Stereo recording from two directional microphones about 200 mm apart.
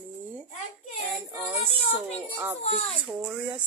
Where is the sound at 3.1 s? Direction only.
5° right (ahead or behind).